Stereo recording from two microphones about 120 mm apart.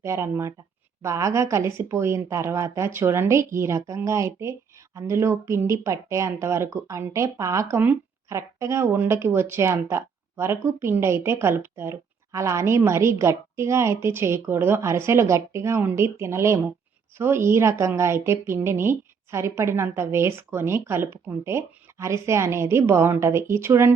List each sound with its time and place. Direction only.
0.0 s speech: 25° right (ahead or behind)